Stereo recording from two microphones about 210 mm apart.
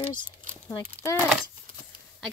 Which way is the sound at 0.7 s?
15° left (ahead or behind).